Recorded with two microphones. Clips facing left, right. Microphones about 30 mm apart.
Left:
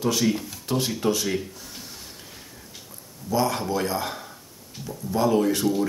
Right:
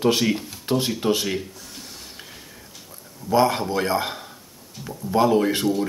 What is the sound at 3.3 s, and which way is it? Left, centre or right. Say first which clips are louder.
Speech: right 5 dB; right.